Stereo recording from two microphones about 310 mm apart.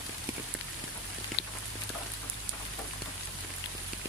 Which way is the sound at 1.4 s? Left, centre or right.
Left.